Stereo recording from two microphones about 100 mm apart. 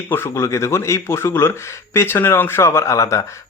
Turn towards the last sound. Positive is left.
turn(degrees=30)  # may be behind; listen again after turning